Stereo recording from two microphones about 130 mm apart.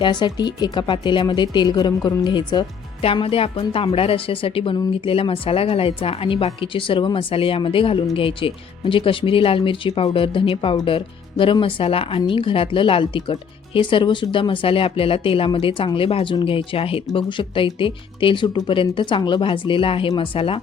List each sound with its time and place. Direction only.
0.0 s speech: 35° left (ahead or behind)
3.0 s speech: 45° left (ahead or behind)